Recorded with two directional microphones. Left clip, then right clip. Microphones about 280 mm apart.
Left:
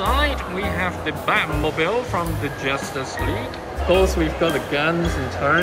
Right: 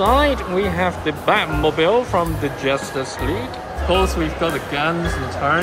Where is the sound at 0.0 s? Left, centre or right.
Centre.